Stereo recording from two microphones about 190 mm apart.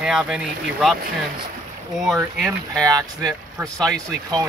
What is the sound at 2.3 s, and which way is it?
Speech, centre (ahead or behind).